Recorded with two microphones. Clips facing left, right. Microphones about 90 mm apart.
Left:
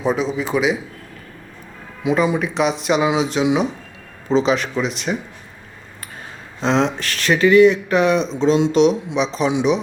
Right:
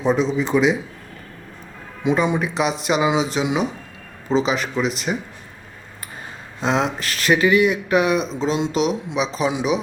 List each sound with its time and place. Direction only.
0.0 s speech: centre (ahead or behind)
2.0 s speech: centre (ahead or behind)
6.6 s speech: 5° right (ahead or behind)